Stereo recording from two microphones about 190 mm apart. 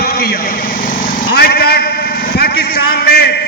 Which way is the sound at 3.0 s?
55° left (ahead or behind).